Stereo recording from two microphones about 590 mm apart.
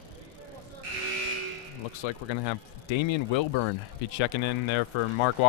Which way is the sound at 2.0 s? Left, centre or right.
Left.